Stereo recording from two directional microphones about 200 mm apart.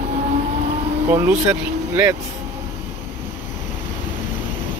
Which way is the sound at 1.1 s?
10° right (ahead or behind).